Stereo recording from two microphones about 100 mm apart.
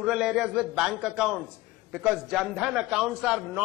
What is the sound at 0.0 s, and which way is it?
A man's voice, 5° right (ahead or behind).